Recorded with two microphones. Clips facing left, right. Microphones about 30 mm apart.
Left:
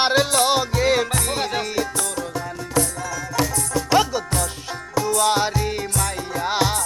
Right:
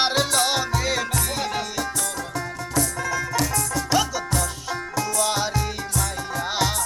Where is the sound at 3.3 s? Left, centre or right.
Centre.